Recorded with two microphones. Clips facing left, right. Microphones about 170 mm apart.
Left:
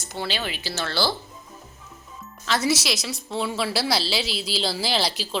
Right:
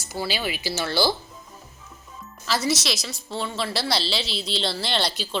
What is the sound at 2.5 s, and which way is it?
A woman's voice, centre (ahead or behind).